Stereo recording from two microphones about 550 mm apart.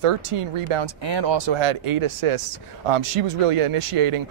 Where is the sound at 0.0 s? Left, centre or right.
Right.